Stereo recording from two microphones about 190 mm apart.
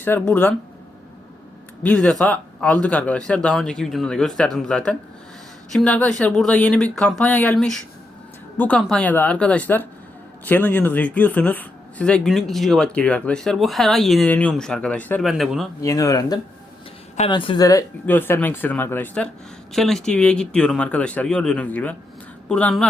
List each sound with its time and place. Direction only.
0.0 s speech: 10° left (ahead or behind)
1.8 s speech: 5° left (ahead or behind)
15.8 s speech: 15° left (ahead or behind)